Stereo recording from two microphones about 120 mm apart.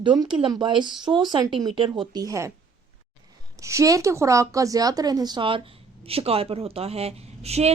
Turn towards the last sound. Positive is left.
turn(degrees=-60)  # may be behind; listen again after turning